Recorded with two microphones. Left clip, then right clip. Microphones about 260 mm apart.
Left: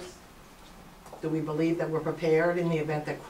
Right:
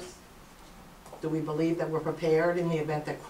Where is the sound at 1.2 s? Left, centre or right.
Centre.